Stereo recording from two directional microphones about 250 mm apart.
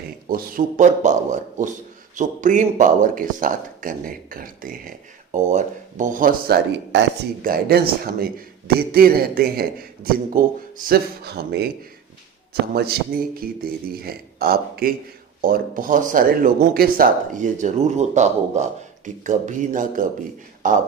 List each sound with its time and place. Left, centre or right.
0.3 s a man's voice: right
12.7 s a man's voice: right